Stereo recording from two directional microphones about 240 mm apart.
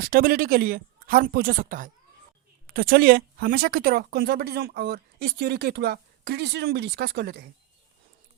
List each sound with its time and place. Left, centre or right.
0.0 s speech: right